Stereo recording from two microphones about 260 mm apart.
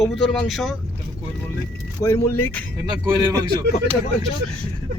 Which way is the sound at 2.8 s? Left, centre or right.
Centre.